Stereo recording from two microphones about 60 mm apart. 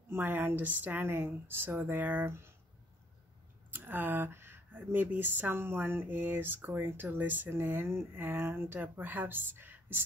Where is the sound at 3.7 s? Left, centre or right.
Right.